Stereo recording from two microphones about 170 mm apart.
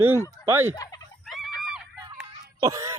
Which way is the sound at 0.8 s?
20° left (ahead or behind).